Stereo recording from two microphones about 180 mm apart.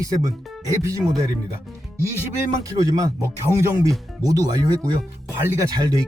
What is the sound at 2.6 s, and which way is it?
Speech, 20° right (ahead or behind).